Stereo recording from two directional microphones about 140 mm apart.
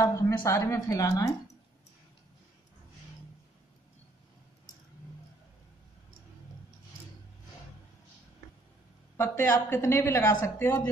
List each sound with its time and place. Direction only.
0.0 s a woman's voice: 25° left (ahead or behind)
9.1 s a woman's voice: 15° left (ahead or behind)